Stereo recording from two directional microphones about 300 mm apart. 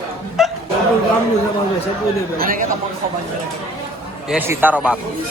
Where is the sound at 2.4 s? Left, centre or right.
Right.